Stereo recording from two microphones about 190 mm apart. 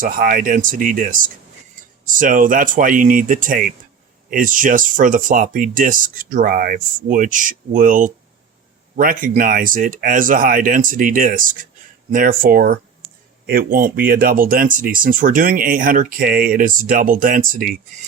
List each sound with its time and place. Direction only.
0.0 s speech: 45° right (ahead or behind)